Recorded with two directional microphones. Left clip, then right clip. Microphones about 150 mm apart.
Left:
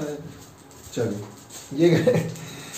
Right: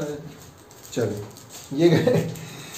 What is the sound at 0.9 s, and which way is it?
Speech, 90° right.